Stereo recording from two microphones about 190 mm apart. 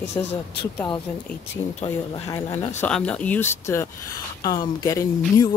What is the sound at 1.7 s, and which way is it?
Speech, 30° left (ahead or behind).